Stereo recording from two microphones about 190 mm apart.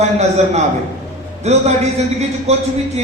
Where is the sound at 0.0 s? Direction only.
35° right (ahead or behind).